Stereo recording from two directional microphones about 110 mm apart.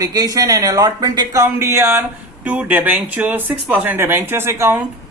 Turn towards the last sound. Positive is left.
turn(degrees=-25)  # may be behind; listen again after turning